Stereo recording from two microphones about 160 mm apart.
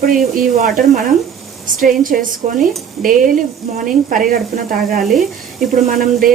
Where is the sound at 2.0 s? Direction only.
60° right (ahead or behind).